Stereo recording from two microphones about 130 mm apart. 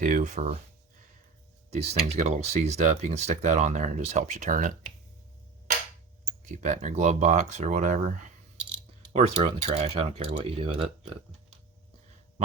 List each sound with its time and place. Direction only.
0.0 s speech: 90° right; by 0.6 s 60° right (ahead or behind)
1.7 s speech: 55° right (ahead or behind); by 4.7 s 80° right
6.4 s speech: 70° right (ahead or behind)
9.1 s speech: 55° right (ahead or behind)